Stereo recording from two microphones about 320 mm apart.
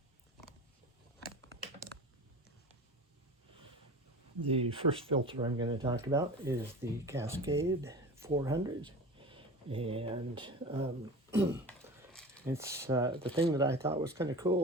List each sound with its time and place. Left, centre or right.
4.4 s speech: centre
12.1 s a sound: centre
12.5 s speech: centre